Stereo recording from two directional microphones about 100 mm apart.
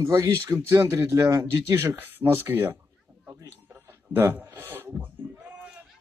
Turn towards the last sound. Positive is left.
turn(degrees=-20)  # may be behind; listen again after turning